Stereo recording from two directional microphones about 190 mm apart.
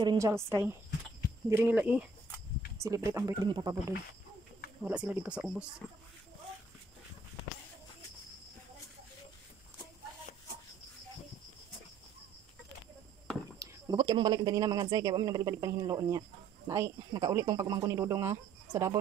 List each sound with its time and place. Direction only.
0.0 s speech: 20° right (ahead or behind)
4.8 s speech: 10° right (ahead or behind)
13.6 s speech: 20° right (ahead or behind)